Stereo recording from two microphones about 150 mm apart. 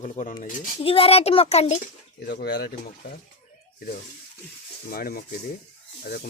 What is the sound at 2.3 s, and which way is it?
Speech, 85° left.